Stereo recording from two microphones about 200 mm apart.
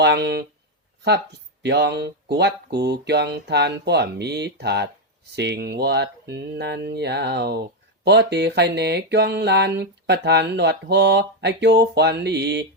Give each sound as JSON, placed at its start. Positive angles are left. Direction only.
{"t": 0.0, "sound": "speech", "side_deg": -55}
{"t": 1.6, "sound": "speech", "side_deg": -55}